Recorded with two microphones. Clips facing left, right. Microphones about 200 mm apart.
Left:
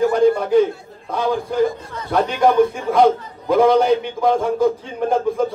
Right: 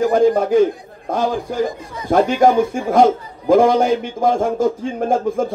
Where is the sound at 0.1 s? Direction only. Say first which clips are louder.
Right 1 dB; 50° right (ahead or behind).